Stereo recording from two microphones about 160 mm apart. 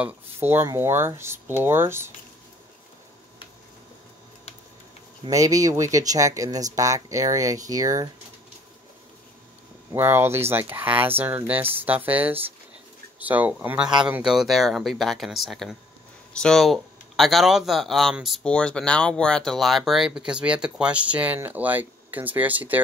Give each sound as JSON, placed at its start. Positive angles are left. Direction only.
{"t": 0.0, "sound": "speech", "side_deg": -15}
{"t": 5.2, "sound": "speech", "side_deg": -20}
{"t": 9.9, "sound": "speech", "side_deg": -15}